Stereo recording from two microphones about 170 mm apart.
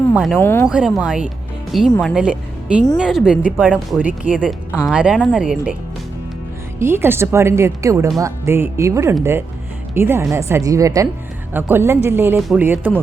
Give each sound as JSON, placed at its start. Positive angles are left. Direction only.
{"t": 0.1, "sound": "speech", "side_deg": 0}
{"t": 0.3, "sound": "speech", "side_deg": 15}
{"t": 0.7, "sound": "a woman's voice", "side_deg": -5}
{"t": 6.7, "sound": "speech", "side_deg": -15}
{"t": 12.4, "sound": "speech", "side_deg": 0}
{"t": 12.6, "sound": "speech", "side_deg": -10}